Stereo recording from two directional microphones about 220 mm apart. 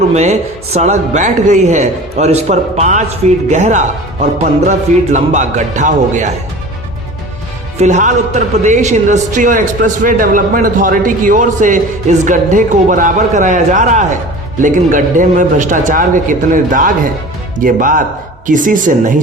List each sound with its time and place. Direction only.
0.1 s speech: 30° right (ahead or behind)
7.8 s speech: 35° right (ahead or behind)